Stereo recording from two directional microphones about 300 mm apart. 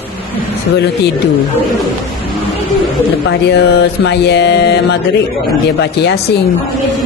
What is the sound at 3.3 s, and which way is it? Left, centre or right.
Speech, left.